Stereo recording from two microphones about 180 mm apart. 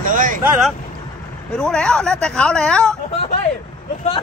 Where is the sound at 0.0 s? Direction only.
45° right (ahead or behind).